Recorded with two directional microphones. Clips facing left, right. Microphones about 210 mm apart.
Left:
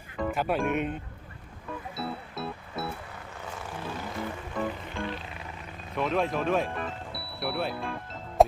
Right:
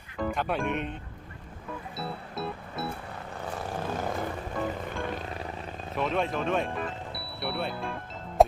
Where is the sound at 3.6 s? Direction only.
50° right (ahead or behind).